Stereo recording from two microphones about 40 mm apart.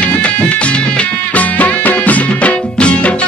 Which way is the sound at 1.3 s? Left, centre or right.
Left.